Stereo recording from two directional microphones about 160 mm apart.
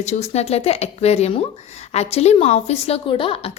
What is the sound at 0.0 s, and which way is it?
A woman's voice, 45° left (ahead or behind).